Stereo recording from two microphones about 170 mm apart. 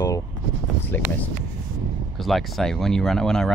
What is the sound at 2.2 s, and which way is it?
Speech, centre (ahead or behind).